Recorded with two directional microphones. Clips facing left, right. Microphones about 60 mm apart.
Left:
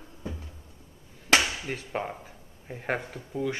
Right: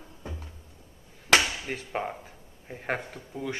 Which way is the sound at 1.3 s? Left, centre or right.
Centre.